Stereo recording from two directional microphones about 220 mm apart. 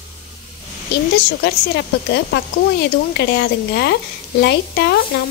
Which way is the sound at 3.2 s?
50° left (ahead or behind).